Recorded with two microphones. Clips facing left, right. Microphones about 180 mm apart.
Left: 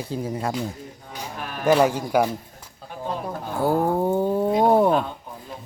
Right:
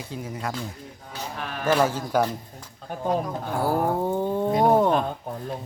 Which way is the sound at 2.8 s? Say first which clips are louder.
Right 5 dB; 5° left (ahead or behind).